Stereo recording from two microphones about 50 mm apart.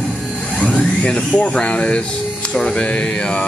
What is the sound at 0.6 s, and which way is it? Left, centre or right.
Speech, left.